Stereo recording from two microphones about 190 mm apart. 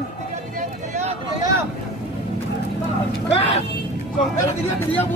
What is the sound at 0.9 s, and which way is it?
Vehicle, 35° right (ahead or behind).